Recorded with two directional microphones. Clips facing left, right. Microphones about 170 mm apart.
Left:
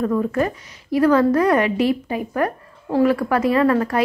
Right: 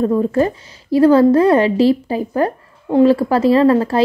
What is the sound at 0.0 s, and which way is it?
A woman's voice, 30° right (ahead or behind).